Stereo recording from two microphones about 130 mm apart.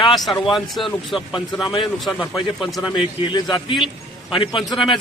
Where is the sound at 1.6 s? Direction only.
40° left (ahead or behind).